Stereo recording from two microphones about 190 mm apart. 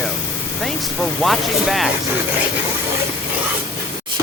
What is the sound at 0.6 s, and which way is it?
Speech, centre (ahead or behind).